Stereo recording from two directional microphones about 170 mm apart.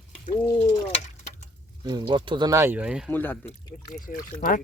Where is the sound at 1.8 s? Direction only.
25° right (ahead or behind); by 3.1 s 5° right (ahead or behind).